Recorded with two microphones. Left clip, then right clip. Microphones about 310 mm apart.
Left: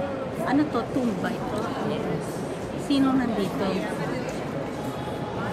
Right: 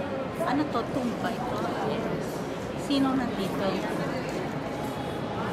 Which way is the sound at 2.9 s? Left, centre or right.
Centre.